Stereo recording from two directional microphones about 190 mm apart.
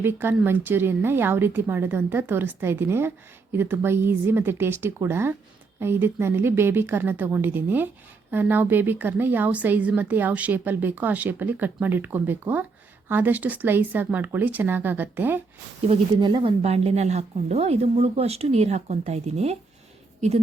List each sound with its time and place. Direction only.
0.0 s speech: 10° right (ahead or behind)
15.9 s speech: 25° right (ahead or behind)